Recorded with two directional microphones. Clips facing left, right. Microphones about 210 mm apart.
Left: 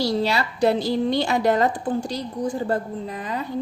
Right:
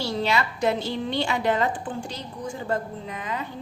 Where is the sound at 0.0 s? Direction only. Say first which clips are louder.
Left 3 dB; 35° left (ahead or behind).